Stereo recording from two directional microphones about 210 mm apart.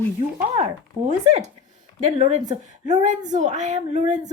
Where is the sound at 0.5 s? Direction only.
30° right (ahead or behind).